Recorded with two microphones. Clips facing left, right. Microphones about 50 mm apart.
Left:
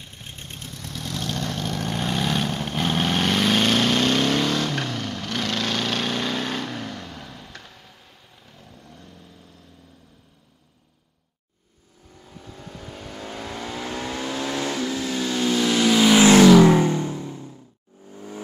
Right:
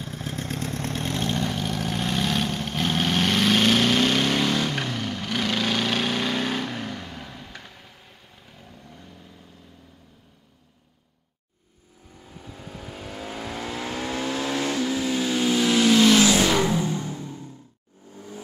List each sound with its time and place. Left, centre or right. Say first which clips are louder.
0.5 s vehicle: right 8 dB; right
0.7 s vehicle: right 7 dB; right
1.0 s vehicle: right 1 dB; right
1.4 s vehicle: right 1 dB; centre
12.2 s vehicle: even; centre
16.3 s vehicle: left 9 dB; left
17.1 s music: left 3 dB; centre